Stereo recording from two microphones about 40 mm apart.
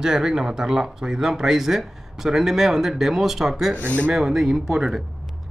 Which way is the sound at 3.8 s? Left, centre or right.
Left.